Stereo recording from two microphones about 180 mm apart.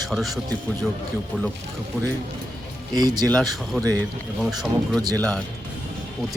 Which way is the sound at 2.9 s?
20° right (ahead or behind).